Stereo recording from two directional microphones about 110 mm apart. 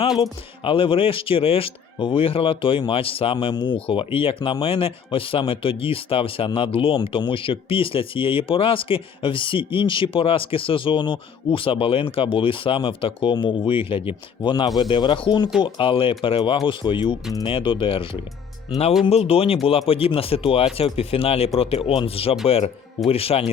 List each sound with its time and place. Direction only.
0.2 s speech: 55° left (ahead or behind)
19.0 s speech: 65° left (ahead or behind)